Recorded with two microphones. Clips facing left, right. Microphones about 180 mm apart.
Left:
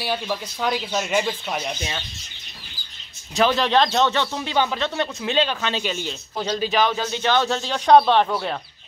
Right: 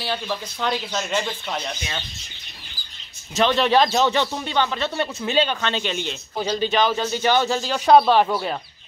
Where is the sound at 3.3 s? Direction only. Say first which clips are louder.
Right 1 dB; centre (ahead or behind).